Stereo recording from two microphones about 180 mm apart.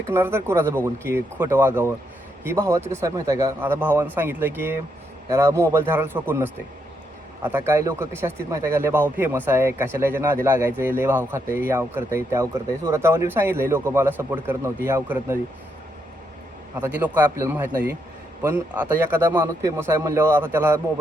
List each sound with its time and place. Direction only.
0.1 s speech: 15° right (ahead or behind)
16.7 s speech: 10° right (ahead or behind)